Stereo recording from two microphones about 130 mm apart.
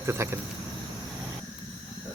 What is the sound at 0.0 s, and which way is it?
Speech, 20° right (ahead or behind).